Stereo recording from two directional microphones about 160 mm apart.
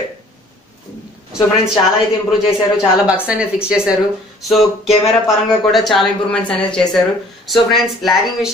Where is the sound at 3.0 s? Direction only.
5° right (ahead or behind).